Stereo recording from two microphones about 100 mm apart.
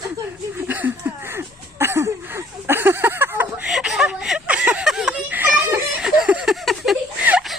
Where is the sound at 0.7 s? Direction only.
20° right (ahead or behind).